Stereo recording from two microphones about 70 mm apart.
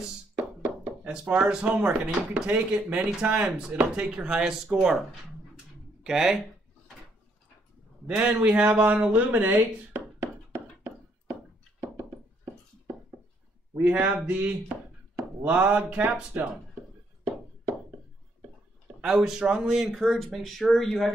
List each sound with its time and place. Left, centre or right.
0.4 s knock: centre
1.3 s speech: centre
6.0 s speech: centre
8.1 s speech: centre
13.7 s speech: right
18.9 s speech: centre